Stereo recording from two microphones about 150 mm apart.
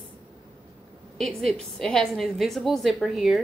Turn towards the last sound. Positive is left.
turn(degrees=0)  # may be behind; listen again after turning